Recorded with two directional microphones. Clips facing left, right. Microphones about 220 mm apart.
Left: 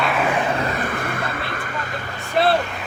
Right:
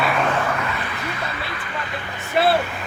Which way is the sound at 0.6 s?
40° left (ahead or behind).